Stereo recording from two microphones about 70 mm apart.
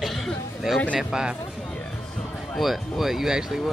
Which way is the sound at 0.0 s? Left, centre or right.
Centre.